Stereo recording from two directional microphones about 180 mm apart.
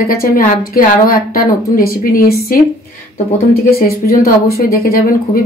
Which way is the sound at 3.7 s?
55° left (ahead or behind).